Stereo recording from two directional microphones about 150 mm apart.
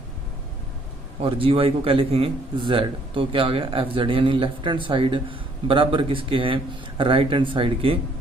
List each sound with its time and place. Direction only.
1.2 s a man's voice: 40° right (ahead or behind)